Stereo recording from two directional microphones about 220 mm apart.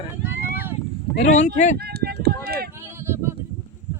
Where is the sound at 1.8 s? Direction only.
45° right (ahead or behind).